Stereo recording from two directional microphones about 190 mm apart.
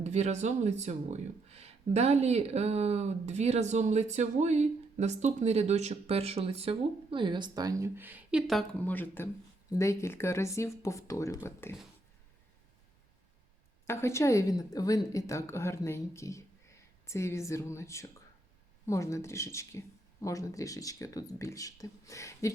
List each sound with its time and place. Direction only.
0.0 s a woman's voice: 35° right (ahead or behind); by 11.8 s 10° left (ahead or behind)
13.8 s a woman's voice: 15° left (ahead or behind)